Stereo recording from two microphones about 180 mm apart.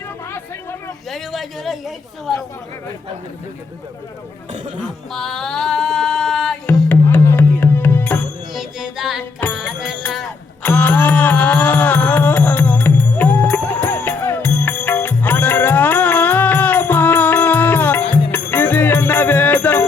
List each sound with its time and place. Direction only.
1.1 s speech: centre (ahead or behind)
4.8 s a sound: centre (ahead or behind)
6.7 s music: 10° left (ahead or behind)
8.5 s music: 5° right (ahead or behind)
9.4 s music: 10° left (ahead or behind)
10.1 s a sound: centre (ahead or behind)
10.7 s music: 10° left (ahead or behind)